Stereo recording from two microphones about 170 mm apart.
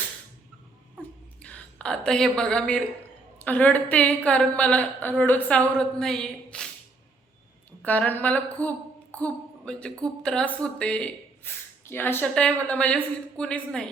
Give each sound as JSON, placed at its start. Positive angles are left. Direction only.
{"t": 1.4, "sound": "speech", "side_deg": 5}
{"t": 7.9, "sound": "speech", "side_deg": 10}